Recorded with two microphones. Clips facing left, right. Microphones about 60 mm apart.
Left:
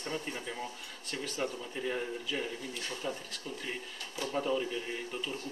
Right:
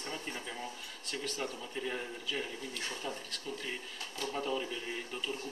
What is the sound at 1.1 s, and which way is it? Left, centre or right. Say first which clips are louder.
Speech: left 2 dB; centre.